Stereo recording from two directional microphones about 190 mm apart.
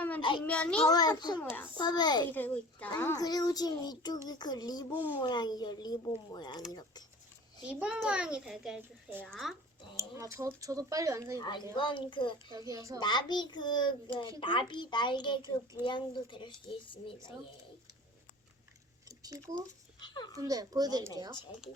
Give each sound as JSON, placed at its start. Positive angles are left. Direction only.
{"t": 0.2, "sound": "a child's voice", "side_deg": 25}
{"t": 0.4, "sound": "a child's voice", "side_deg": 5}
{"t": 0.9, "sound": "a child's voice", "side_deg": 20}
{"t": 1.4, "sound": "a child's voice", "side_deg": 10}
{"t": 1.8, "sound": "a child's voice", "side_deg": 20}
{"t": 2.3, "sound": "a child's voice", "side_deg": 10}
{"t": 7.7, "sound": "a child's voice", "side_deg": -5}
{"t": 10.0, "sound": "speech", "side_deg": -15}
{"t": 11.3, "sound": "a child's voice", "side_deg": 20}
{"t": 12.5, "sound": "speech", "side_deg": -15}
{"t": 13.0, "sound": "a child's voice", "side_deg": 25}
{"t": 19.0, "sound": "a sound", "side_deg": -20}
{"t": 20.0, "sound": "a sound", "side_deg": 25}
{"t": 20.3, "sound": "a child's voice", "side_deg": -20}